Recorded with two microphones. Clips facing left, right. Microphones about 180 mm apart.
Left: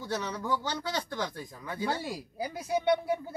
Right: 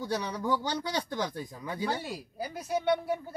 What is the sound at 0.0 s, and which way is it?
Speech, 10° right (ahead or behind).